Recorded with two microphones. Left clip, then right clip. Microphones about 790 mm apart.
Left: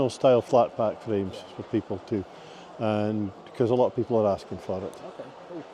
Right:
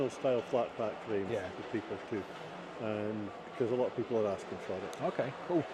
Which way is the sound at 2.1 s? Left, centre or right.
Left.